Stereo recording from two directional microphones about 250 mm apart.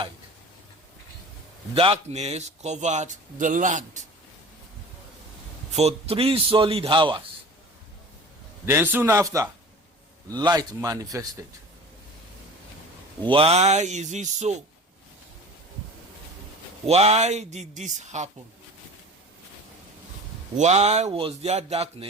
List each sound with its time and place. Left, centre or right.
1.7 s speech: right
5.7 s speech: right
8.6 s a man's voice: centre
13.2 s speech: right
16.8 s speech: right
20.6 s speech: right